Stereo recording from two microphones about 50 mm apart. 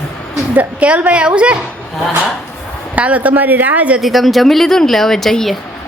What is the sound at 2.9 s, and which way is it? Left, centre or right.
Speech, right.